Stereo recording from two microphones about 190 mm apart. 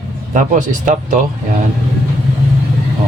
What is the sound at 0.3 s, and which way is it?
Speech, 45° right (ahead or behind).